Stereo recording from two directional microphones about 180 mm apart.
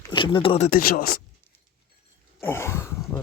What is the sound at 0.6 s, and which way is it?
Speech, 55° left (ahead or behind).